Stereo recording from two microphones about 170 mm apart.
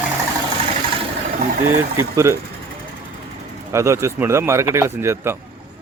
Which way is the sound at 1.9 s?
15° right (ahead or behind).